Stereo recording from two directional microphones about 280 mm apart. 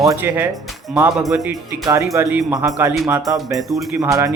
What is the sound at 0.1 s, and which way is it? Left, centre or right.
Speech, centre.